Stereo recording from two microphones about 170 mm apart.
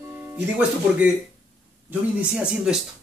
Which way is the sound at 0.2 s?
10° right (ahead or behind).